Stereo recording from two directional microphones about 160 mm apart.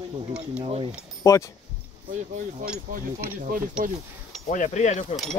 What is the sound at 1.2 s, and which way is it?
Speech, 20° left (ahead or behind).